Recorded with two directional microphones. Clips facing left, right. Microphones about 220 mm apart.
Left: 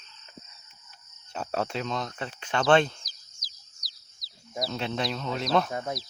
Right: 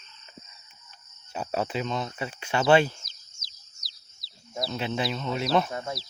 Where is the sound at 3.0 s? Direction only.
25° right (ahead or behind).